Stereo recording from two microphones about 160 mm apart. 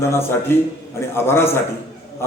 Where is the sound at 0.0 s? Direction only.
15° left (ahead or behind).